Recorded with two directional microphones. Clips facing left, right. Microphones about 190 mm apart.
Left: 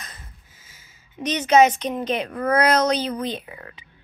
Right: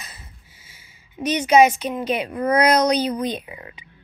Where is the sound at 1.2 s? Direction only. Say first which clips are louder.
Right 1 dB; 10° right (ahead or behind).